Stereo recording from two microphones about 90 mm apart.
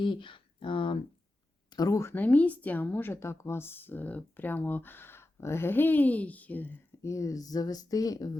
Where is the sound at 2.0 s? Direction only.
25° left (ahead or behind).